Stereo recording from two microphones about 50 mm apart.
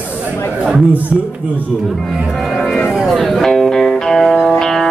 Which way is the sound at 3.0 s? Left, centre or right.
Centre.